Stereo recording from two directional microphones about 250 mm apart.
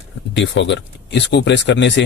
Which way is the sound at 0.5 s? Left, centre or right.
Left.